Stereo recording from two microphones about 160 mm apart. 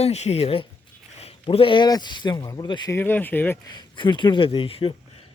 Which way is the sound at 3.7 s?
30° left (ahead or behind).